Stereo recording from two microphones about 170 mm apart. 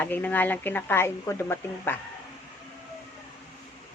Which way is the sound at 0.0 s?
10° left (ahead or behind).